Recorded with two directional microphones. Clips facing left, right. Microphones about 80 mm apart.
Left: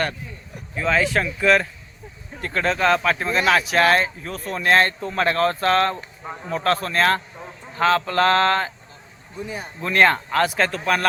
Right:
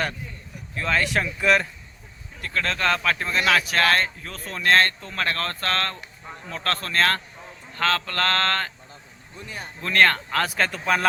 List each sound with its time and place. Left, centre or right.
0.8 s speech: centre
2.4 s speech: left
2.6 s speech: centre